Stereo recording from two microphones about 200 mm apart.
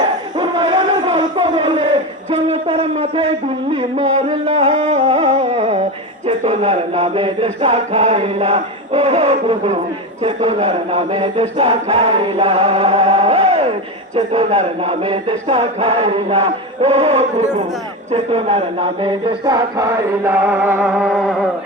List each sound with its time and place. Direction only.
0.3 s a sound: 20° right (ahead or behind)
2.3 s speech: 30° right (ahead or behind)
10.2 s chant: 30° right (ahead or behind)
14.2 s speech: 30° right (ahead or behind)
18.1 s music: 30° right (ahead or behind); by 21.3 s centre (ahead or behind)